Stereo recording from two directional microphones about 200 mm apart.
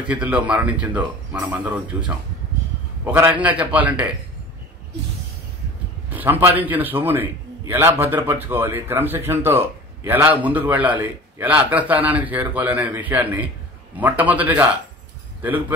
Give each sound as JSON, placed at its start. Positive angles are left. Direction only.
{"t": 0.1, "sound": "a man's voice", "side_deg": -5}
{"t": 6.0, "sound": "a man's voice", "side_deg": -10}